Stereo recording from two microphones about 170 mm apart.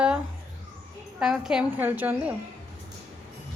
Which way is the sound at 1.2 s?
5° right (ahead or behind).